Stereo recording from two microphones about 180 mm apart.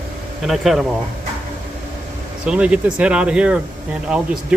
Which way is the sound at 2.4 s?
5° right (ahead or behind).